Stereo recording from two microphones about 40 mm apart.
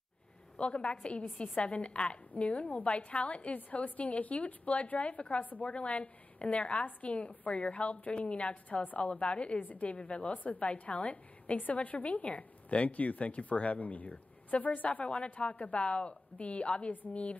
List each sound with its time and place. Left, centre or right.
0.6 s a woman's voice: left
3.5 s a woman's voice: left
8.6 s a woman's voice: left
9.6 s a woman's voice: left
9.9 s a woman's voice: left
10.4 s a woman's voice: left
10.7 s a woman's voice: left